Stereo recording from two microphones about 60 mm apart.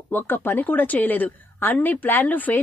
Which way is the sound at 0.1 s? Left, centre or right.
Left.